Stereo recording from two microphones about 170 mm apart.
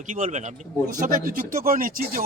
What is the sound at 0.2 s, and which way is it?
Speech, 45° right (ahead or behind).